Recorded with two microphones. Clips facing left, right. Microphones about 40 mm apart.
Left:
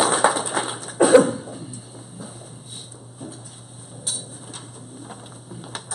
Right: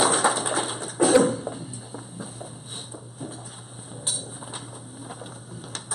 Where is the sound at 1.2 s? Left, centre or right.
Centre.